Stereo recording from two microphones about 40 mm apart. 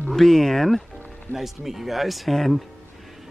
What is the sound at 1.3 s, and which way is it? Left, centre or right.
Speech, centre.